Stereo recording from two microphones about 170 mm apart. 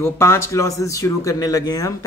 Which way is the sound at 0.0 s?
15° left (ahead or behind).